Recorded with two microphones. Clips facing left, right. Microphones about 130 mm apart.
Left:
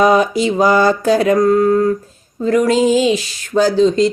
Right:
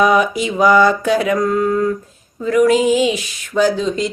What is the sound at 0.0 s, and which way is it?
Mantra, 30° left (ahead or behind).